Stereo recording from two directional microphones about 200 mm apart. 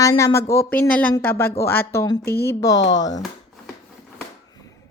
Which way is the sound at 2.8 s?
65° left (ahead or behind).